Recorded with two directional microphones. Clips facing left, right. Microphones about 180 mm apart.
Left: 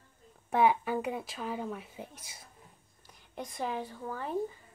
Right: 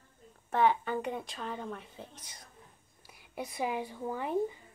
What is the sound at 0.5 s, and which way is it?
A woman's voice, 10° left (ahead or behind).